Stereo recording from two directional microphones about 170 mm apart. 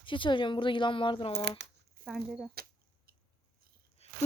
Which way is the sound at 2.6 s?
60° right (ahead or behind).